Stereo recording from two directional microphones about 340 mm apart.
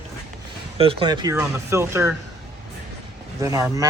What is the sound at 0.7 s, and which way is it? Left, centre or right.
Speech, centre.